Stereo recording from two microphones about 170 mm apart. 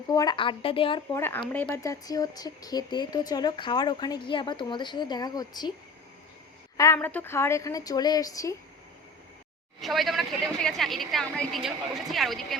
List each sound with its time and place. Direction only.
0.1 s speech: 25° left (ahead or behind)
1.1 s speech: 15° left (ahead or behind)
6.7 s speech: 15° left (ahead or behind)
9.8 s a woman's voice: centre (ahead or behind)